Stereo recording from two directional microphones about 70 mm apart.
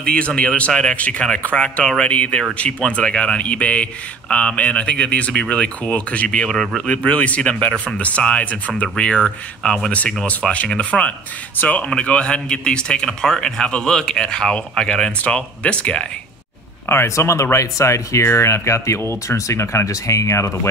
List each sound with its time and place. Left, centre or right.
0.0 s a man's voice: centre
7.1 s a man's voice: centre
16.9 s speech: left